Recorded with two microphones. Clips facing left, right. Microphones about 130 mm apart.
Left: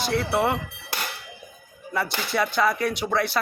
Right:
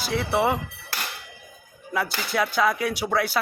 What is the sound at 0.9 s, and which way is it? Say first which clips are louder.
Music: left 2 dB; 20° left (ahead or behind).